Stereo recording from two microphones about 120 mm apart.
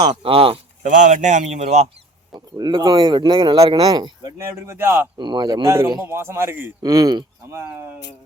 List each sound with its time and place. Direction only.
0.0 s speech: 50° right (ahead or behind)
0.8 s speech: 90° right; by 1.9 s 65° right (ahead or behind)
2.6 s speech: 35° right (ahead or behind)
4.4 s speech: 20° right (ahead or behind)
5.1 s speech: 40° right (ahead or behind)
6.1 s speech: 20° right (ahead or behind)
6.8 s speech: 30° right (ahead or behind)
7.5 s speech: 20° right (ahead or behind)